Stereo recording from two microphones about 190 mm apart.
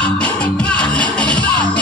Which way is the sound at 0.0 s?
5° left (ahead or behind).